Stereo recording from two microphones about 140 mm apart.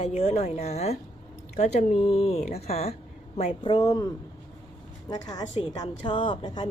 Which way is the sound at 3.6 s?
30° left (ahead or behind).